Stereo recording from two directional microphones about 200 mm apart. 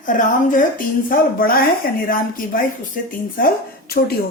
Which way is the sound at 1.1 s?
45° left (ahead or behind).